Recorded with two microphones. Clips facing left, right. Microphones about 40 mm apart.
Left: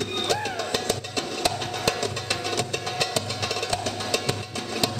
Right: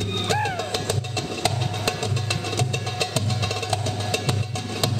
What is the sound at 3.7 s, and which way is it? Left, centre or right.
Music, right.